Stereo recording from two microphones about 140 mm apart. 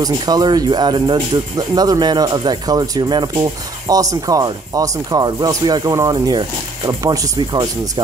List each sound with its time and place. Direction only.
0.0 s speech: 30° right (ahead or behind)